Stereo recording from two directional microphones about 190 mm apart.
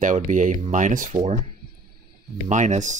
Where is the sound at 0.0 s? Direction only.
40° right (ahead or behind).